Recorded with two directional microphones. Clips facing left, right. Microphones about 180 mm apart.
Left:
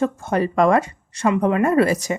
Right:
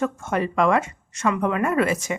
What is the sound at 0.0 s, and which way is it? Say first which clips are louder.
Speech: left 3 dB; 35° left (ahead or behind).